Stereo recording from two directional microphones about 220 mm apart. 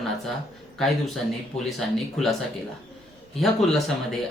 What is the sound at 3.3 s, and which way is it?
Speech, centre (ahead or behind).